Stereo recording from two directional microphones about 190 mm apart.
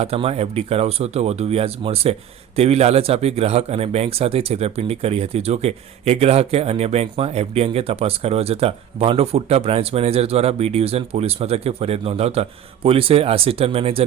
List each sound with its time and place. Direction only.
0.0 s speech: 30° right (ahead or behind)